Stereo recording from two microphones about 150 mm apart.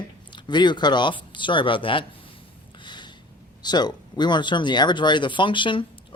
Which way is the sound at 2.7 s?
30° left (ahead or behind).